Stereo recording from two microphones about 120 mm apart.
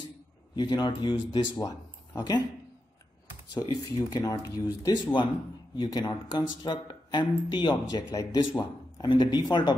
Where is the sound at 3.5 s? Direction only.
35° left (ahead or behind).